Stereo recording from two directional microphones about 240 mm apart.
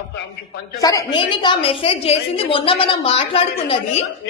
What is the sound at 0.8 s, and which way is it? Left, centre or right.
A woman's voice, centre.